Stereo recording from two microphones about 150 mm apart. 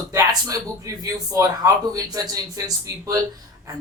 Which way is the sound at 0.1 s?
20° right (ahead or behind).